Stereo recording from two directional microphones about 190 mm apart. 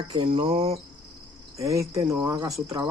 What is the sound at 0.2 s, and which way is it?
Speech, 30° right (ahead or behind).